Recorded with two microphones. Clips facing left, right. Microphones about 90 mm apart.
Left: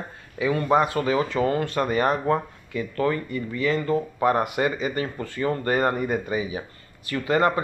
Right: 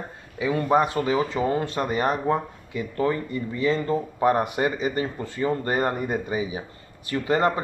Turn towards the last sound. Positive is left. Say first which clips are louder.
# left 1 dB
turn(degrees=-25)  # may be behind; listen again after turning